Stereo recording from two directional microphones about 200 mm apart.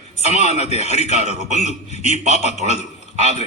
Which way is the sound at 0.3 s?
35° left (ahead or behind).